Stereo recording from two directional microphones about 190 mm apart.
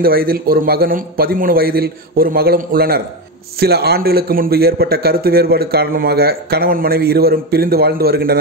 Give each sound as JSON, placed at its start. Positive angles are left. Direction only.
{"t": 0.0, "sound": "a man's voice", "side_deg": -50}